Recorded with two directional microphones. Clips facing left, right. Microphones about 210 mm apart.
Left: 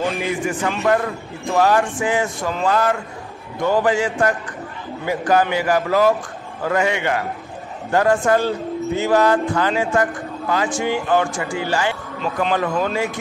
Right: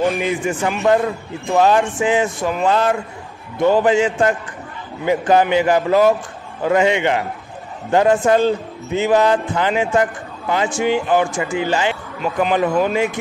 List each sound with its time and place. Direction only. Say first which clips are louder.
0.2 s a man's voice: right 2 dB; 20° right (ahead or behind)